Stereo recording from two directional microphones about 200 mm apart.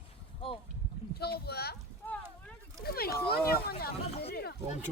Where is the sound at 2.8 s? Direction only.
50° left (ahead or behind).